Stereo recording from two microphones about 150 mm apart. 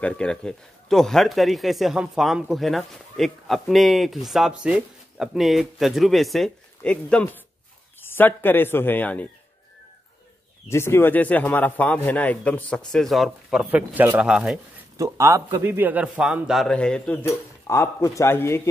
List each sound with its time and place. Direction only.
0.0 s a man's voice: 5° left (ahead or behind)
10.7 s a man's voice: 15° left (ahead or behind); by 14.6 s 5° right (ahead or behind)
15.0 s a man's voice: 20° right (ahead or behind); by 17.2 s 5° left (ahead or behind)
17.2 s a man's voice: 20° left (ahead or behind)